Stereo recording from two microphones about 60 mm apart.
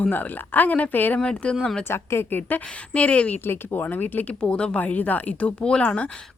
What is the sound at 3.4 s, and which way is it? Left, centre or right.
Speech, left.